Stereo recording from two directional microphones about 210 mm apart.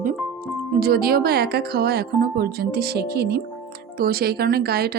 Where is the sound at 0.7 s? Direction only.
45° right (ahead or behind).